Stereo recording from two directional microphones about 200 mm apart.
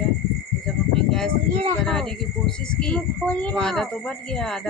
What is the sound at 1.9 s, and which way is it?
Speech, 5° left (ahead or behind).